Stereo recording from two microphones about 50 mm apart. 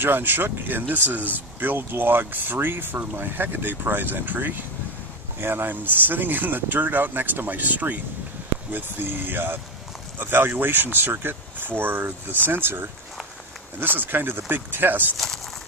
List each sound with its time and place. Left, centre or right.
0.0 s speech: right
15.1 s speech: centre